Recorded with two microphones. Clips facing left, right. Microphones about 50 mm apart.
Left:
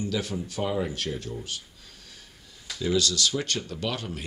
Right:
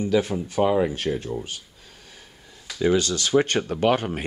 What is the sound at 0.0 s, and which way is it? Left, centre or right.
Speech, right.